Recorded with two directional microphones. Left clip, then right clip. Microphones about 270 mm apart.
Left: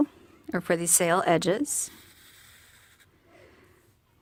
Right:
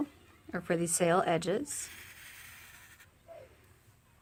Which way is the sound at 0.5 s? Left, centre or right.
Left.